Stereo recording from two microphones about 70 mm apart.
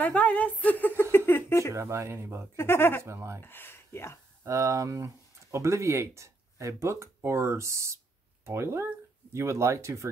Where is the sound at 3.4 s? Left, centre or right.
Left.